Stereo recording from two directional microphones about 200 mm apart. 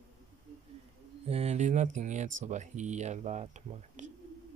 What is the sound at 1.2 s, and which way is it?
Speech, 30° right (ahead or behind).